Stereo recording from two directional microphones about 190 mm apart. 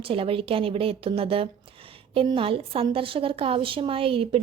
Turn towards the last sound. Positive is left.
turn(degrees=-30)  # may be behind; listen again after turning